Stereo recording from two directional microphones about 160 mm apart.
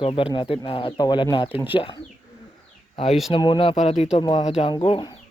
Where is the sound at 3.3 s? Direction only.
30° left (ahead or behind).